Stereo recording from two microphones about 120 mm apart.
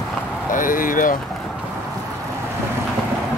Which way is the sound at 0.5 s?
90° left.